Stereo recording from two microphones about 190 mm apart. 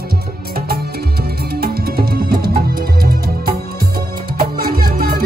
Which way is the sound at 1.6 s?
55° right (ahead or behind).